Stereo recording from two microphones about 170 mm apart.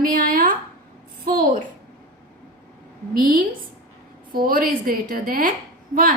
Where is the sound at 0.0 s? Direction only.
55° right (ahead or behind).